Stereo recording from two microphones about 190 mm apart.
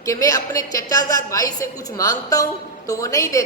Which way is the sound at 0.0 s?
15° left (ahead or behind).